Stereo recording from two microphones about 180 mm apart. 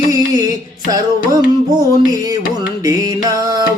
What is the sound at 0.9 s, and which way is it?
Music, 20° right (ahead or behind).